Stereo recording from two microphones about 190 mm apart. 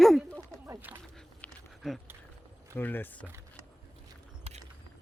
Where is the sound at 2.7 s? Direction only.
10° left (ahead or behind).